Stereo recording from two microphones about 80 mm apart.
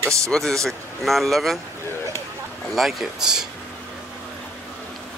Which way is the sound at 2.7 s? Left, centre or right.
Centre.